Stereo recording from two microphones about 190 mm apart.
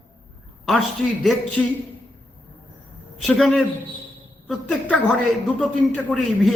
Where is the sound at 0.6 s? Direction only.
Centre (ahead or behind).